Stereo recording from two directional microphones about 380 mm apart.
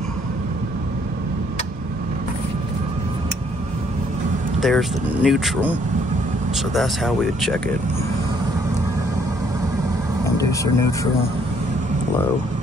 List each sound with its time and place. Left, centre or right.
4.6 s speech: centre
10.2 s vehicle: centre